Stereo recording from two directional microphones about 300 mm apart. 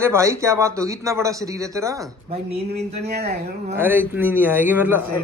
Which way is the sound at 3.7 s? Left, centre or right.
Centre.